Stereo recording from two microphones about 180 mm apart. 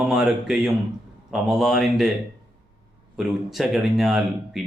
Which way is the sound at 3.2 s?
Centre (ahead or behind).